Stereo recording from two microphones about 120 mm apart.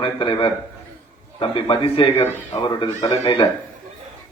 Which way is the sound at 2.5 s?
35° left (ahead or behind).